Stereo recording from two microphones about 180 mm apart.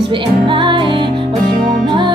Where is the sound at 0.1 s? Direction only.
25° right (ahead or behind).